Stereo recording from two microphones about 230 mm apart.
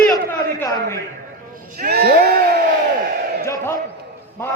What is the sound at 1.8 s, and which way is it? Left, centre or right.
Speech, right.